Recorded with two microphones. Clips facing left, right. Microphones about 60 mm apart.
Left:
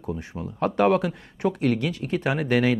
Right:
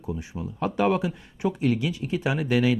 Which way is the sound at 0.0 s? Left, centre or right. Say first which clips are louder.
Left 1 dB; left.